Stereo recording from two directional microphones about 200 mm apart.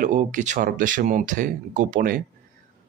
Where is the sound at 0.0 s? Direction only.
40° right (ahead or behind).